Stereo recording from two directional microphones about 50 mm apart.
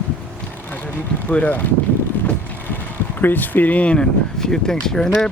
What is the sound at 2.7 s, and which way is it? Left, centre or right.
Speech, left.